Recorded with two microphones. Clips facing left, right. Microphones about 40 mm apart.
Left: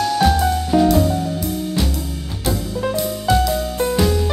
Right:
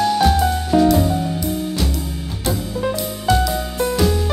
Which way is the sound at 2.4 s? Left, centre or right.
Centre.